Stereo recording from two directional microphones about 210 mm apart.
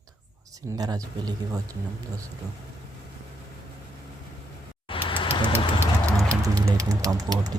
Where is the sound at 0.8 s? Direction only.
20° right (ahead or behind).